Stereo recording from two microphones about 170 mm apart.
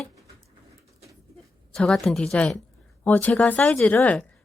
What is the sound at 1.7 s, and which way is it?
A woman's voice, 5° left (ahead or behind).